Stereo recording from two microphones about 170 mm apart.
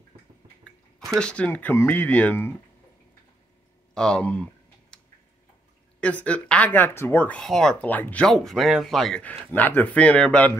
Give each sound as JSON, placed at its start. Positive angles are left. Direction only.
{"t": 0.1, "sound": "drip", "side_deg": -25}
{"t": 0.7, "sound": "speech", "side_deg": 0}
{"t": 3.9, "sound": "speech", "side_deg": 5}
{"t": 4.9, "sound": "tick-tock", "side_deg": 5}
{"t": 5.9, "sound": "speech", "side_deg": 5}